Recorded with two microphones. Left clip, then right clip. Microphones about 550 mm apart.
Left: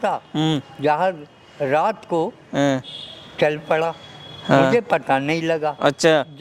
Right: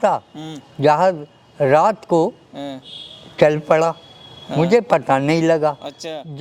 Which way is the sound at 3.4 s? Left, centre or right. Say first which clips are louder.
Right 5 dB; right.